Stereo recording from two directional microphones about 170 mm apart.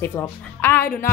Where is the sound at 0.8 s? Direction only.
60° left (ahead or behind).